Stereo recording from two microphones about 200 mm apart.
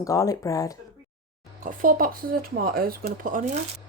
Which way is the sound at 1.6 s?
45° right (ahead or behind).